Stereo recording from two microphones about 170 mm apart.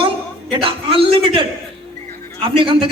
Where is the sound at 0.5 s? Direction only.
30° right (ahead or behind).